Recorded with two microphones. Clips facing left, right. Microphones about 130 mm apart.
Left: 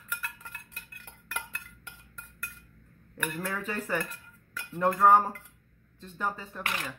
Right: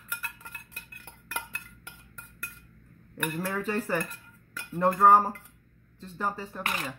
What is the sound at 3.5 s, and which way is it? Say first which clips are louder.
Speech: right 4 dB; 35° right (ahead or behind).